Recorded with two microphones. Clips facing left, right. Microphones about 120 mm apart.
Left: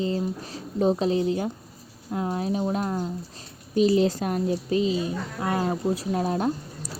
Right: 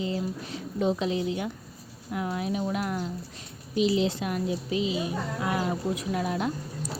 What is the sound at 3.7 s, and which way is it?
A woman's voice, 45° left (ahead or behind).